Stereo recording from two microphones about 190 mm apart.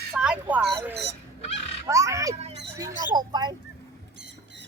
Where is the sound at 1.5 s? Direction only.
35° left (ahead or behind).